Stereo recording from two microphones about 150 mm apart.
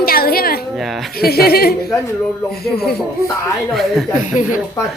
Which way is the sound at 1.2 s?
90° left.